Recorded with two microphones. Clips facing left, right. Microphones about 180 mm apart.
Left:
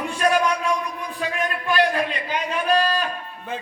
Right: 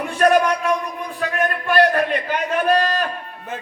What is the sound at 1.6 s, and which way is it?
A man's voice, 55° right (ahead or behind).